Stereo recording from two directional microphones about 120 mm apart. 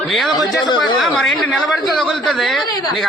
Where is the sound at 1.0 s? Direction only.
Centre (ahead or behind).